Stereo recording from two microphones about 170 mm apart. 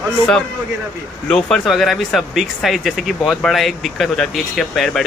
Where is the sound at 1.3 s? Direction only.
5° left (ahead or behind).